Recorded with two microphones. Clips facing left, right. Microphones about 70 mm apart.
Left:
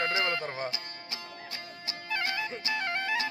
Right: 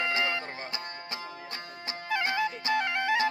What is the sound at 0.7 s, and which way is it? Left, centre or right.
Music, right.